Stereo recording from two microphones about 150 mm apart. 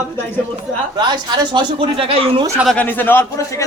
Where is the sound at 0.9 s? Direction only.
30° right (ahead or behind).